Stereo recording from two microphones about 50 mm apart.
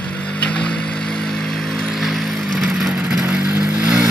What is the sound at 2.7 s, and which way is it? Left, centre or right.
Vehicle, centre.